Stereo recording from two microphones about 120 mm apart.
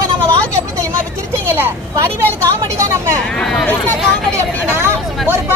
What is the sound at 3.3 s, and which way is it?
Speech, centre (ahead or behind).